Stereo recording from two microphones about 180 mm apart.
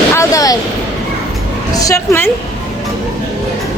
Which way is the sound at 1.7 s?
20° left (ahead or behind).